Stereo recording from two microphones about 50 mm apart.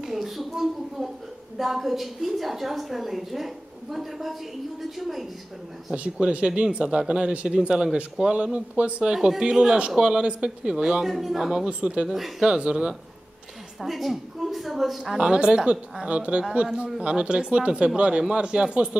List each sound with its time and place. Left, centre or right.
0.0 s a woman's voice: centre
6.1 s a woman's voice: centre
11.1 s a woman's voice: centre
11.6 s a woman's voice: right
12.1 s a woman's voice: centre
12.4 s a woman's voice: centre
13.7 s a woman's voice: centre
15.1 s a woman's voice: centre